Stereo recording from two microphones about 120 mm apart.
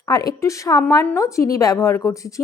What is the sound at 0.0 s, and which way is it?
Speech, 30° left (ahead or behind).